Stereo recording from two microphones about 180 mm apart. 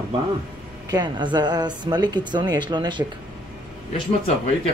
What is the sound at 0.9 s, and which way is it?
Speech, 25° right (ahead or behind).